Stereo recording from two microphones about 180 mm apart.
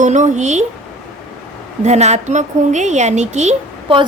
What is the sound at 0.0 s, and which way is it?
Speech, 45° right (ahead or behind).